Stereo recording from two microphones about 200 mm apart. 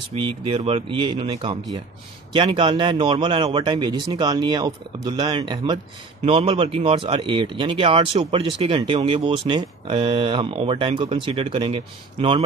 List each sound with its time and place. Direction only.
0.1 s speech: 30° right (ahead or behind)